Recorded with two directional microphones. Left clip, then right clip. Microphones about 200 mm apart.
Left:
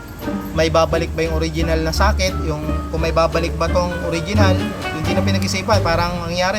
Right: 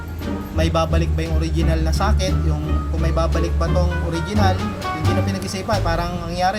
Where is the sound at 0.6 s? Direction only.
25° left (ahead or behind).